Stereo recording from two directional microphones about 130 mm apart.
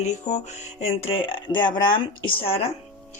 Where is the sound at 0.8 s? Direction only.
50° left (ahead or behind).